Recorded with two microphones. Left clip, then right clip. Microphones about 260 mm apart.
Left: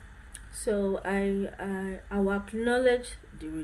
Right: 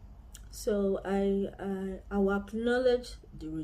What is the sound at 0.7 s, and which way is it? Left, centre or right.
Speech, centre.